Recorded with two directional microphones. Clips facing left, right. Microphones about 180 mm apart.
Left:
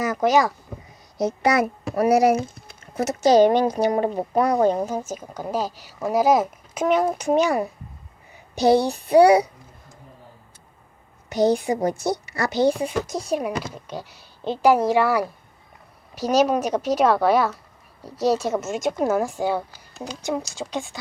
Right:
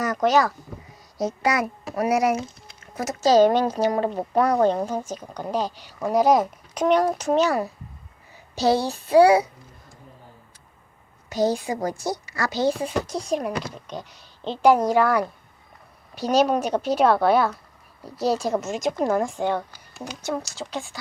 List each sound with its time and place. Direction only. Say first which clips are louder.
0.0 s a sound: left 1 dB; 10° left (ahead or behind)
1.5 s a child's voice: left 4 dB; 30° left (ahead or behind)
3.2 s speech: left 1 dB; 15° left (ahead or behind)
11.4 s a woman's voice: left 4 dB; 20° left (ahead or behind)
12.5 s a woman's voice: left 3 dB; 10° left (ahead or behind)